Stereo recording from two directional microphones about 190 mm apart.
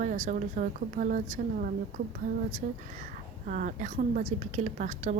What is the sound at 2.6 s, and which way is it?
A woman's voice, 40° right (ahead or behind).